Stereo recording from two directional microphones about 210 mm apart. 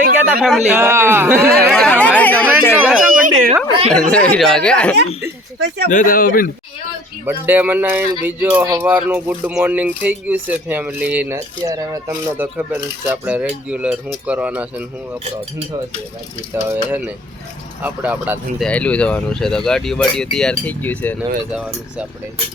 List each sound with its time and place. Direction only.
0.2 s speech: 5° right (ahead or behind)
1.7 s chatter: 5° left (ahead or behind)
2.7 s a sound: 5° right (ahead or behind)
3.2 s a sound: 40° right (ahead or behind)
3.9 s speech: 5° left (ahead or behind)
5.5 s speech: 55° right (ahead or behind)
5.9 s speech: 40° left (ahead or behind)
7.3 s speech: 10° right (ahead or behind)
16.6 s speech: 10° right (ahead or behind)
18.6 s speech: 5° left (ahead or behind)
21.5 s speech: 5° right (ahead or behind)